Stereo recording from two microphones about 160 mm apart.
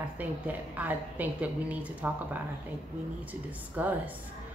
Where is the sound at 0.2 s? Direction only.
10° right (ahead or behind).